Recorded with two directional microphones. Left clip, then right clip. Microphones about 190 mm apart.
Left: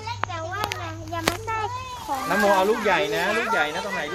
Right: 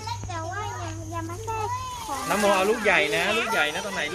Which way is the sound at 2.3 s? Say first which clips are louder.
Left 2 dB; 45° left (ahead or behind).